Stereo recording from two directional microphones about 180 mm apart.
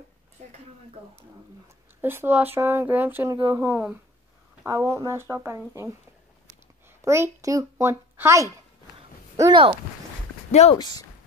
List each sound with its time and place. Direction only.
2.0 s speech: 10° right (ahead or behind)
7.1 s speech: 15° right (ahead or behind)
9.4 s speech: 25° right (ahead or behind)
10.5 s speech: 35° left (ahead or behind)
10.8 s speech: 25° left (ahead or behind)